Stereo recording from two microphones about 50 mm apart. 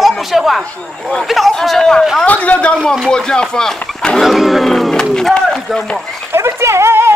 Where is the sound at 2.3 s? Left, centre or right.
Left.